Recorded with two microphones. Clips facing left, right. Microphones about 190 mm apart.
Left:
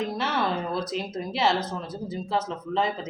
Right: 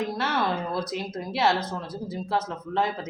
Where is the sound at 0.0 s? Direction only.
Centre (ahead or behind).